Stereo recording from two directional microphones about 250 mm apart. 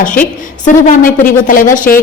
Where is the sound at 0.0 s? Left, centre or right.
Left.